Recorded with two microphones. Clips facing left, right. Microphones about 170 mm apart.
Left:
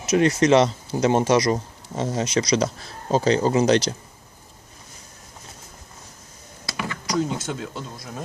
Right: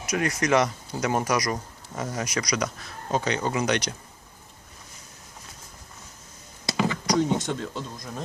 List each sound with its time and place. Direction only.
0.0 s speech: 25° left (ahead or behind)
6.7 s a sound: 20° right (ahead or behind)
7.2 s speech: 5° left (ahead or behind)